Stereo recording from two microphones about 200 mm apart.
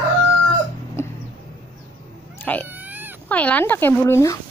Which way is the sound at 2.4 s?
10° left (ahead or behind).